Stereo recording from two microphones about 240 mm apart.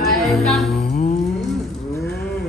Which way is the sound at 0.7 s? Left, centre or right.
Left.